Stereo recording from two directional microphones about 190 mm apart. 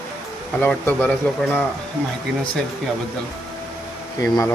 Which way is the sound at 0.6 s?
10° left (ahead or behind).